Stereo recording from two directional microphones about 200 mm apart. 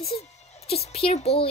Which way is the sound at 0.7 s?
30° left (ahead or behind).